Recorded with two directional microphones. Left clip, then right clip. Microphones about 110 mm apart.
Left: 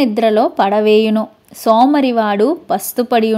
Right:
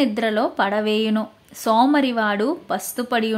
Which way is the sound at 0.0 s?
30° left (ahead or behind).